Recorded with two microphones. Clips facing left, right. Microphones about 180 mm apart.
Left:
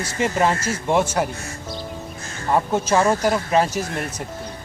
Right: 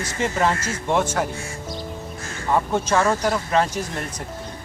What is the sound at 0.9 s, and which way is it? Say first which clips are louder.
Speech: left 2 dB; 10° left (ahead or behind).